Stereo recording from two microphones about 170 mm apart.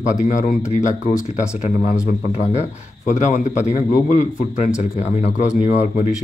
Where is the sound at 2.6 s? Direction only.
45° left (ahead or behind).